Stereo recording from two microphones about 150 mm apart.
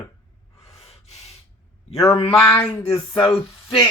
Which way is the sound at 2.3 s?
5° left (ahead or behind).